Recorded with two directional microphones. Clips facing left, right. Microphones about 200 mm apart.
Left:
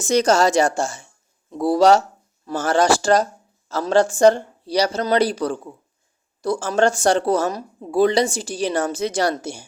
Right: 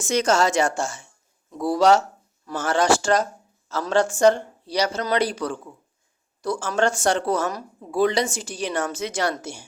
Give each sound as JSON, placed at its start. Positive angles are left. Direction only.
{"t": 0.0, "sound": "speech", "side_deg": 35}